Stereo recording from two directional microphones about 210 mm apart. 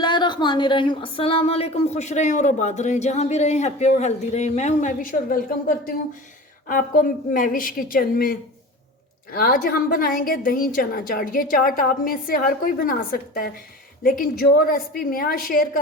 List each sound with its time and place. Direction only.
0.0 s a woman's voice: 20° left (ahead or behind); by 15.8 s 45° left (ahead or behind)